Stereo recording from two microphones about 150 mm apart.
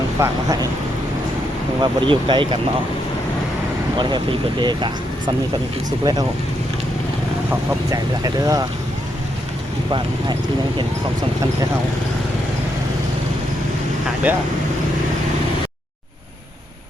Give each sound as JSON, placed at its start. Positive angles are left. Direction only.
{"t": 0.2, "sound": "speech", "side_deg": -25}
{"t": 1.8, "sound": "speech", "side_deg": -35}
{"t": 3.9, "sound": "speech", "side_deg": -30}
{"t": 7.7, "sound": "speech", "side_deg": -20}
{"t": 14.3, "sound": "speech", "side_deg": -10}